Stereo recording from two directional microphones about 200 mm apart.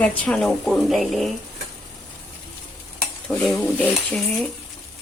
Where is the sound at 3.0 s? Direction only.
5° left (ahead or behind).